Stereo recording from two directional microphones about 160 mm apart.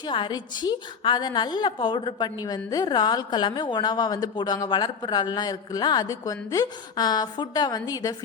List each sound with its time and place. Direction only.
0.0 s a woman's voice: 30° left (ahead or behind)